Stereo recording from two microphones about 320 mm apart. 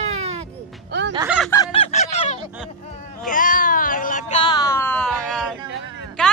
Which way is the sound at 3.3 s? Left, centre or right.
Left.